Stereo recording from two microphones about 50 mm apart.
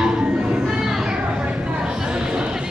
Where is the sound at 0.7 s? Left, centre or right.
Centre.